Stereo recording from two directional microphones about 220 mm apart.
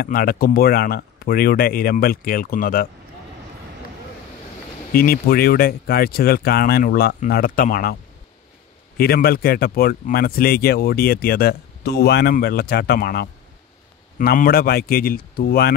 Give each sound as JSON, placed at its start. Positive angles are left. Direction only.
{"t": 0.0, "sound": "speech", "side_deg": 40}
{"t": 4.9, "sound": "speech", "side_deg": 40}